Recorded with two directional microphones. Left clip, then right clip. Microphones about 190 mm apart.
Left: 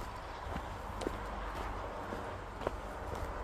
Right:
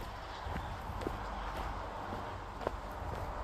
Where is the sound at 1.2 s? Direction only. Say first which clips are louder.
Right 1 dB; 50° right (ahead or behind).